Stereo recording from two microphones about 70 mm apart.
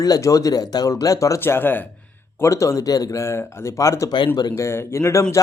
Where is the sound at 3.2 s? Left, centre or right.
Left.